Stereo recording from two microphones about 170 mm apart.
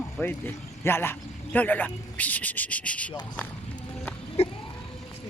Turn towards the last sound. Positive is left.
turn(degrees=40)  # may be behind; listen again after turning